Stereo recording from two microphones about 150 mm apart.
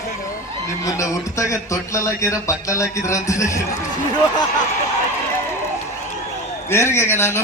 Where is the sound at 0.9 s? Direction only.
20° left (ahead or behind).